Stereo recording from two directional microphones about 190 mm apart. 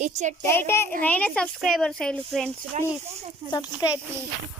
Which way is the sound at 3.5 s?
20° left (ahead or behind).